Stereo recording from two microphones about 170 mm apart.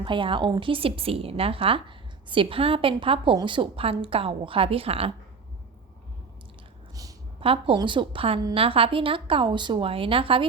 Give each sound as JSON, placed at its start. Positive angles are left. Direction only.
{"t": 0.0, "sound": "a woman's voice", "side_deg": -30}
{"t": 6.9, "sound": "a sound", "side_deg": -20}
{"t": 7.4, "sound": "a woman's voice", "side_deg": -35}